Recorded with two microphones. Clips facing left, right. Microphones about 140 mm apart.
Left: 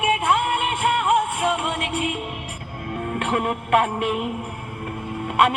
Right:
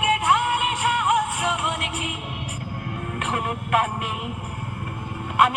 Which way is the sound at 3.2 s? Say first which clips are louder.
Left 3 dB; 55° left (ahead or behind).